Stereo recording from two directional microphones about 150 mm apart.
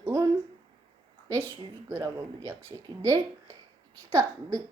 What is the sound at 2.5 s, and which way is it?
A child's voice, 20° right (ahead or behind).